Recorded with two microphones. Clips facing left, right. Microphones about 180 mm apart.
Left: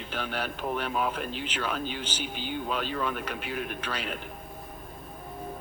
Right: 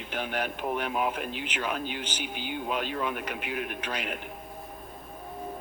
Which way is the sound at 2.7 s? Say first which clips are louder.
Right 1 dB; 10° right (ahead or behind).